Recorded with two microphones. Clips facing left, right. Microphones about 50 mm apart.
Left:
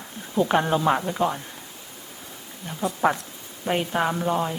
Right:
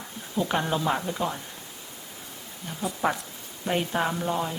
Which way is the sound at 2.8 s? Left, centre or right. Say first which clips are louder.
Left 4 dB; centre.